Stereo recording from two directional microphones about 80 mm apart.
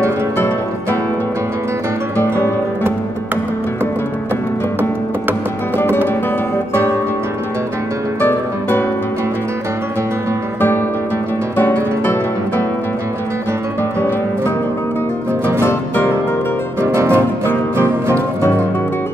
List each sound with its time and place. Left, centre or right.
8.2 s music: left
11.5 s music: left
16.8 s music: right